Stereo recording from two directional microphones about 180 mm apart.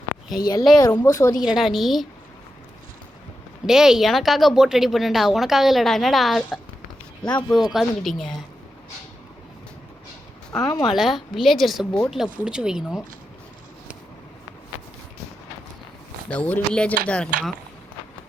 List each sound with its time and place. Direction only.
0.8 s speech: 15° left (ahead or behind)
1.4 s speech: 5° right (ahead or behind)
3.7 s speech: 5° right (ahead or behind)
10.8 s speech: centre (ahead or behind)
16.3 s speech: 5° left (ahead or behind)